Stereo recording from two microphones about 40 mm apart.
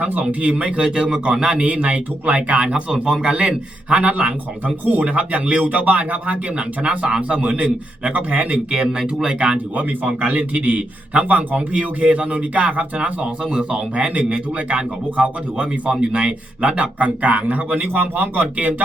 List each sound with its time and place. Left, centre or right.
0.0 s speech: right
0.4 s a man's voice: right
6.6 s a man's voice: right
8.7 s a man's voice: centre
9.7 s a man's voice: right